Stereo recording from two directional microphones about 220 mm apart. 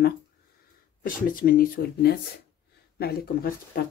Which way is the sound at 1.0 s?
40° left (ahead or behind).